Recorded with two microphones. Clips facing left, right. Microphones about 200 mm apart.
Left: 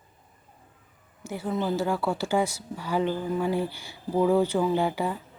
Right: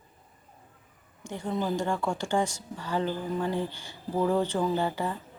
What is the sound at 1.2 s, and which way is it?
A woman's voice, 5° left (ahead or behind).